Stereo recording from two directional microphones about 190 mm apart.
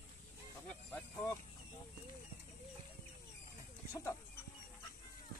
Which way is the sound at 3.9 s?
15° left (ahead or behind).